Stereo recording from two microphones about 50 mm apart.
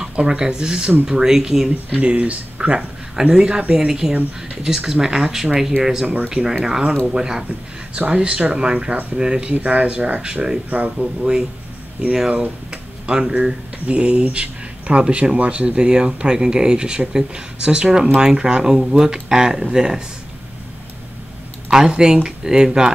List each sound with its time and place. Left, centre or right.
0.0 s speech: centre
1.9 s speech: right
10.2 s speech: centre
10.7 s speech: right
13.2 s speech: centre
21.6 s speech: centre